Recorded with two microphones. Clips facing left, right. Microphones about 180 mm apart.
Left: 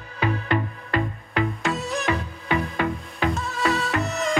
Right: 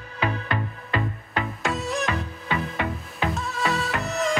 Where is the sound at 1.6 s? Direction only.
Centre (ahead or behind).